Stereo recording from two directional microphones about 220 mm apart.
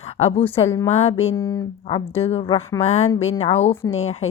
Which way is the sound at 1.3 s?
15° left (ahead or behind).